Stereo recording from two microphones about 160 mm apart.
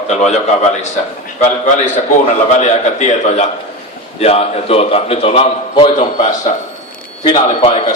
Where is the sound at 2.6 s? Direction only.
45° left (ahead or behind).